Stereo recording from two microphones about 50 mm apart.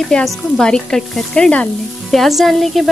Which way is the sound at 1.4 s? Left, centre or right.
Left.